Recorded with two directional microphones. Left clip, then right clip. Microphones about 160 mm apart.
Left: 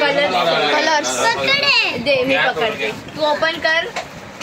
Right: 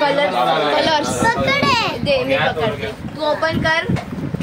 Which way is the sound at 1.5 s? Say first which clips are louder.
Left 1 dB; 15° right (ahead or behind).